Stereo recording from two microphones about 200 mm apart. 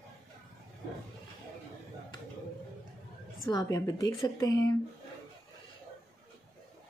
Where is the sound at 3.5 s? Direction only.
20° left (ahead or behind).